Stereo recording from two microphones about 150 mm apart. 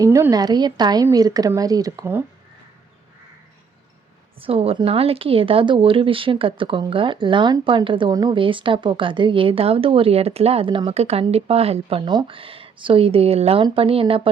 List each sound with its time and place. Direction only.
0.0 s speech: 20° right (ahead or behind)
4.4 s speech: 40° right (ahead or behind)